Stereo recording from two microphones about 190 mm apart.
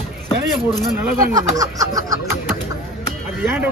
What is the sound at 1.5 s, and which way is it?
Speech, 20° right (ahead or behind).